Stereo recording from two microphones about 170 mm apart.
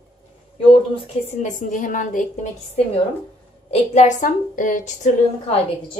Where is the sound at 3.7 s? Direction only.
45° left (ahead or behind).